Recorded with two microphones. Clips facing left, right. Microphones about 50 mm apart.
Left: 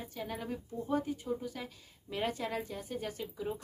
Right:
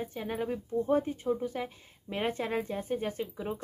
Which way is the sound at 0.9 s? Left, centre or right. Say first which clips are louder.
Right 4 dB; right.